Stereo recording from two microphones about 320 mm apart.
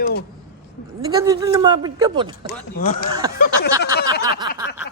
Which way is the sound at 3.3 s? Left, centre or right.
Left.